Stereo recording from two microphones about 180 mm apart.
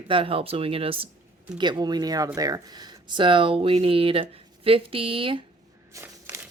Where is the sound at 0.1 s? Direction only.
30° right (ahead or behind).